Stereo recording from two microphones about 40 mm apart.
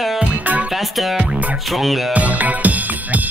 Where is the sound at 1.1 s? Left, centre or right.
Right.